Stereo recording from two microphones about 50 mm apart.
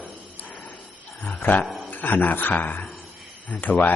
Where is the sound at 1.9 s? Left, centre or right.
Left.